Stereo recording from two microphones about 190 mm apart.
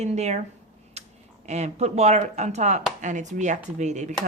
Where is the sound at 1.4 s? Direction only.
35° right (ahead or behind).